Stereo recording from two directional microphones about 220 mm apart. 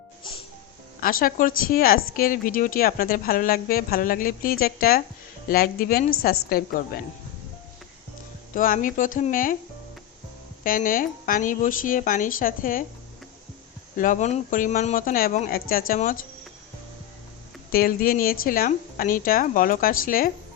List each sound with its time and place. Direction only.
1.0 s a woman's voice: 40° left (ahead or behind)
8.5 s a woman's voice: 40° left (ahead or behind)
10.6 s a woman's voice: 40° left (ahead or behind)
13.9 s a woman's voice: 35° left (ahead or behind)
17.7 s a woman's voice: 40° left (ahead or behind)